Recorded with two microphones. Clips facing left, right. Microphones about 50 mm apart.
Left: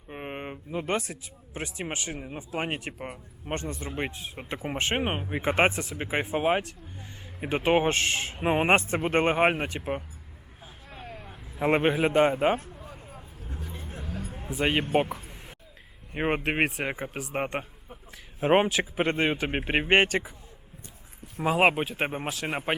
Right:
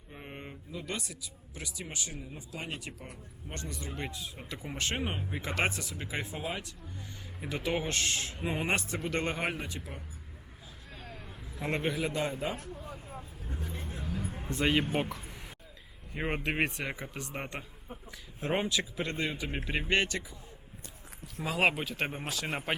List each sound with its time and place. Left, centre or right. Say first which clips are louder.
0.1 s speech: left 9 dB; left
3.5 s speech: left 8 dB; left
6.4 s speech: left 12 dB; left
10.9 s vehicle: left 5 dB; centre
11.8 s speech: left 10 dB; left
13.1 s vehicle: even; centre
14.2 s a sound: left 2 dB; centre
14.6 s speech: left 2 dB; centre
16.1 s speech: left 6 dB; left
21.3 s speech: left 6 dB; left